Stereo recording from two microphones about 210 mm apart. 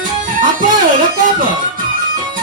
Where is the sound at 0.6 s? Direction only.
40° right (ahead or behind).